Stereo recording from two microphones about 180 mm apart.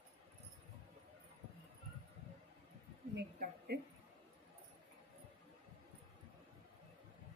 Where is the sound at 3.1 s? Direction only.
60° right (ahead or behind).